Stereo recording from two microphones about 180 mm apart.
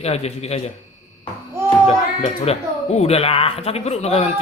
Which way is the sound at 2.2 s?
35° left (ahead or behind).